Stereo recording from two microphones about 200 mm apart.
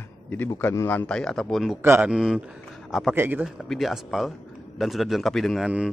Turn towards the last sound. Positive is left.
turn(degrees=-5)  # may be behind; listen again after turning